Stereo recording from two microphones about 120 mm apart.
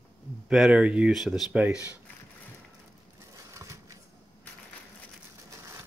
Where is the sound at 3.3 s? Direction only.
25° right (ahead or behind).